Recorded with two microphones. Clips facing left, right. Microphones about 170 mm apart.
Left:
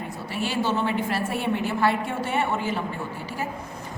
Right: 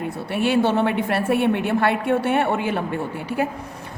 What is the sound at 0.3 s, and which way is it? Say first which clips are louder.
A woman's voice: right 7 dB; 60° right (ahead or behind).